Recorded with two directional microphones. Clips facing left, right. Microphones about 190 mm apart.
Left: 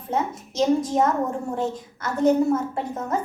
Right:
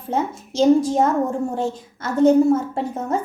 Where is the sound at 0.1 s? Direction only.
30° right (ahead or behind).